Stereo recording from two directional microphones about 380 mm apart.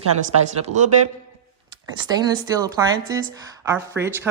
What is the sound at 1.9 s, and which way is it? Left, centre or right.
Speech, centre.